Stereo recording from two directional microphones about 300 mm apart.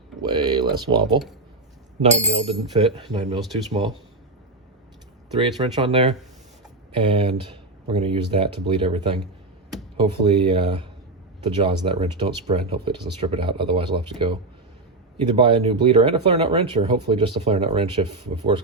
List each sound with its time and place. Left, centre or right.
0.2 s speech: centre
5.4 s speech: centre
15.4 s speech: centre